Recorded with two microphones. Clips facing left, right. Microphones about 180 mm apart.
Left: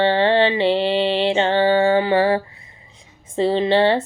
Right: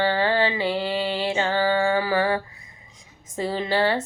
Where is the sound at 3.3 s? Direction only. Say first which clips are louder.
Left 7 dB; 25° left (ahead or behind).